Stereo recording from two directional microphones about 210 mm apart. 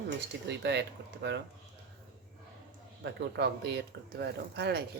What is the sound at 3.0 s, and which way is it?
Speech, 55° right (ahead or behind).